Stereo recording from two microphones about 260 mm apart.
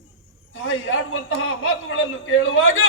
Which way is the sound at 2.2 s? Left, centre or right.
Left.